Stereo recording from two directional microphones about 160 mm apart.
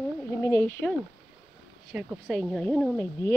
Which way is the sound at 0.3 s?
20° left (ahead or behind).